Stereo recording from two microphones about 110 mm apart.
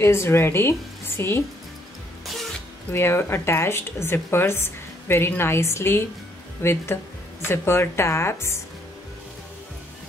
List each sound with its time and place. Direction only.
0.0 s speech: 25° left (ahead or behind)
2.9 s speech: 20° left (ahead or behind)